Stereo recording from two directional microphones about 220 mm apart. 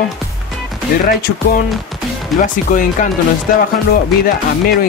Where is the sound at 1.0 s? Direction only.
40° left (ahead or behind).